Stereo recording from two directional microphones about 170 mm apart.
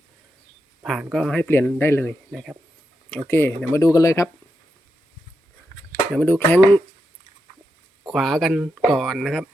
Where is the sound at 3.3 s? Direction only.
15° left (ahead or behind).